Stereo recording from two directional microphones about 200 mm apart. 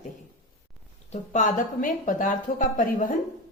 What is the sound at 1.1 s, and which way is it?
A woman's voice, 40° left (ahead or behind).